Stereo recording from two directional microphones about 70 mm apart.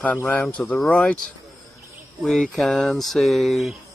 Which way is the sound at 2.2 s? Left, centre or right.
Centre.